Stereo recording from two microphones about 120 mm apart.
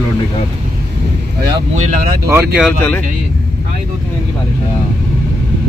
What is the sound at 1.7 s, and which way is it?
Speech, 90° right.